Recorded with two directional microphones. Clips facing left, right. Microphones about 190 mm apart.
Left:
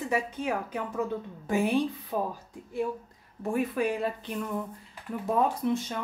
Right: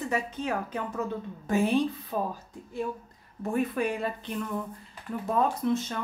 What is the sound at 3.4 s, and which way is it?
A woman's voice, 5° left (ahead or behind).